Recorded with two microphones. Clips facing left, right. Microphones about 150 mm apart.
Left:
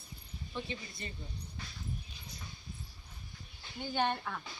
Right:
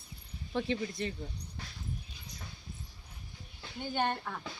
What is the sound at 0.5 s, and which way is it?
Speech, 90° right.